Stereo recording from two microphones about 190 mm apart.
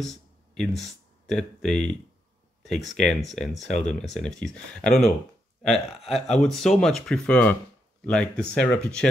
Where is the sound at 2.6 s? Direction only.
Centre (ahead or behind).